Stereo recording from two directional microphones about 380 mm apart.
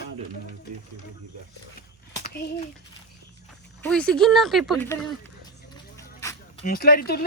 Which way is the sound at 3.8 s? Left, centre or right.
Centre.